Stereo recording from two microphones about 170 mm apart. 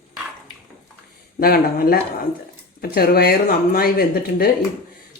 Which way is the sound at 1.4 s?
60° left (ahead or behind).